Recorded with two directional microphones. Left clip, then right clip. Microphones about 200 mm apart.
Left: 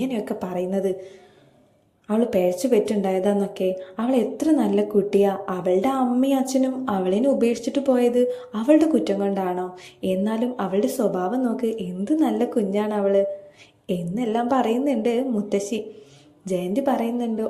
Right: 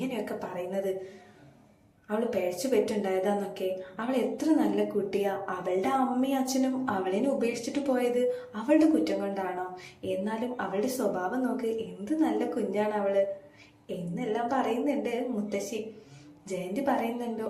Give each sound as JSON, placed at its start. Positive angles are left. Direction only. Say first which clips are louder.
{"t": 0.1, "sound": "speech", "louder": "left 7 dB", "side_deg": 40}
{"t": 2.0, "sound": "a woman's voice", "louder": "left 8 dB", "side_deg": 40}
{"t": 16.7, "sound": "speech", "louder": "left 4 dB", "side_deg": 40}